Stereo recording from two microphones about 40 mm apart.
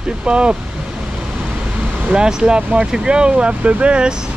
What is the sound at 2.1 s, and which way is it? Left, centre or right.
Speech, right.